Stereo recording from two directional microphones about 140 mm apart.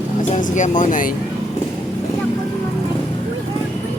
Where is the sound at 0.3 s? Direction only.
65° left (ahead or behind).